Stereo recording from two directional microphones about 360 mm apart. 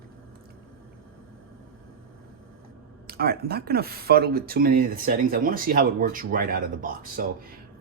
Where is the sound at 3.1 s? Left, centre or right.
Right.